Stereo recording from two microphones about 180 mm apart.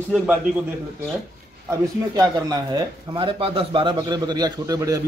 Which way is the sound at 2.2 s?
20° right (ahead or behind).